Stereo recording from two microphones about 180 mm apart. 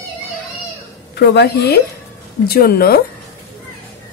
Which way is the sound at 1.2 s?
70° left (ahead or behind).